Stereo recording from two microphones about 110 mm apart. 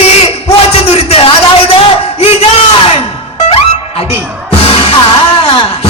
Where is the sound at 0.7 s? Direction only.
65° left (ahead or behind).